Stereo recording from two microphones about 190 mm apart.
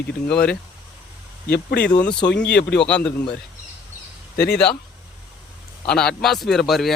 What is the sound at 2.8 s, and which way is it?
Speech, 5° left (ahead or behind).